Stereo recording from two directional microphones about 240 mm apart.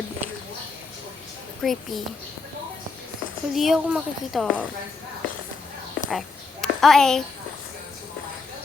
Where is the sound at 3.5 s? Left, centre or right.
Centre.